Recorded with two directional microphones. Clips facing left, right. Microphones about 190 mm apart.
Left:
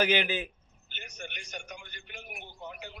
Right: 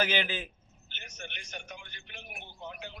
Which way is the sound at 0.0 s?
15° left (ahead or behind).